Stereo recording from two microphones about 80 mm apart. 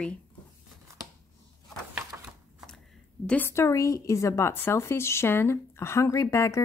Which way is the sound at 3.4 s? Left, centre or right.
Left.